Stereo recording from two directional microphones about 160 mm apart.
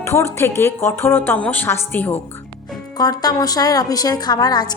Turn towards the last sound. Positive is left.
turn(degrees=25)  # may be behind; listen again after turning